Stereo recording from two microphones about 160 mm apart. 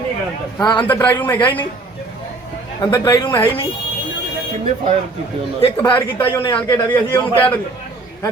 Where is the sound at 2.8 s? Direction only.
25° left (ahead or behind).